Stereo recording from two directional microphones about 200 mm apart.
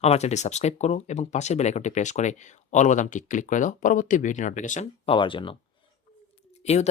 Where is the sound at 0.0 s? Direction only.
35° left (ahead or behind).